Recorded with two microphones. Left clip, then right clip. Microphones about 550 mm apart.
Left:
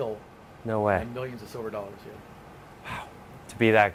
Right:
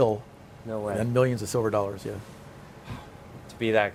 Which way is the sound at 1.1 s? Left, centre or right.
Right.